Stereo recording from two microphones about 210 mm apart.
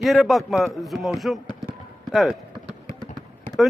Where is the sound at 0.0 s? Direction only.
Centre (ahead or behind).